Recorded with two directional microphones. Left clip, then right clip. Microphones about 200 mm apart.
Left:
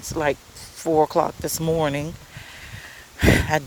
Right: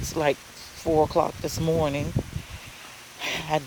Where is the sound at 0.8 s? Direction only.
20° left (ahead or behind).